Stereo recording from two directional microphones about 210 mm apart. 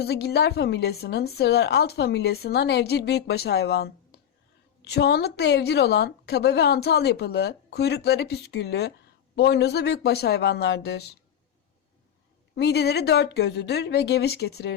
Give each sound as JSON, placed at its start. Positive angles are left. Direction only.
{"t": 0.0, "sound": "a woman's voice", "side_deg": 50}
{"t": 12.5, "sound": "a woman's voice", "side_deg": 50}